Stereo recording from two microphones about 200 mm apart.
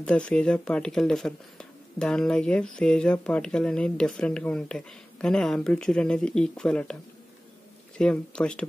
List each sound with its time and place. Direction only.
0.0 s speech: 5° left (ahead or behind)
8.0 s speech: 5° left (ahead or behind)